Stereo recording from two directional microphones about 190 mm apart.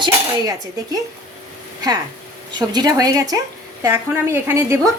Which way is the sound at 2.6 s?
20° right (ahead or behind).